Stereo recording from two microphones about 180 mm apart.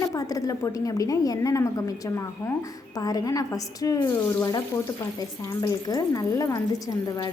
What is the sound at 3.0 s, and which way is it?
Speech, 20° left (ahead or behind).